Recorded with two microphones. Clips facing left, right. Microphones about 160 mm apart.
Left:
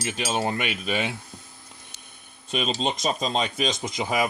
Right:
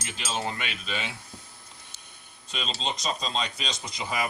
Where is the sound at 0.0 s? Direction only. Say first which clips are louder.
Left 6 dB; 60° left (ahead or behind).